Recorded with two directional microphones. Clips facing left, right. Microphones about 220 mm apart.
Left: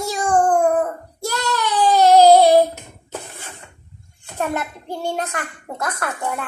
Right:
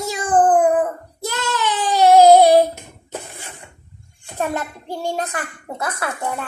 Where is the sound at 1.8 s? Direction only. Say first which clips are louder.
Even; 15° right (ahead or behind).